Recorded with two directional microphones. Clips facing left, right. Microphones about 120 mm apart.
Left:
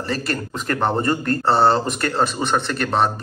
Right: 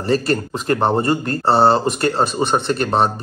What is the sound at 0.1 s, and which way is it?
Speech, 35° right (ahead or behind).